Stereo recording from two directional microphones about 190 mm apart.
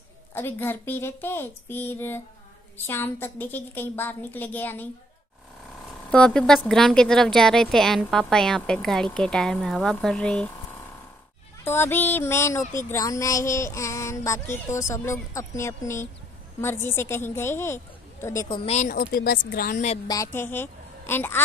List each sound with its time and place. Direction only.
0.3 s child singing: 10° left (ahead or behind)
6.1 s a woman's voice: 5° left (ahead or behind)
11.6 s child singing: 10° left (ahead or behind)
18.7 s speech: 40° left (ahead or behind)
20.1 s a woman's voice: 15° left (ahead or behind)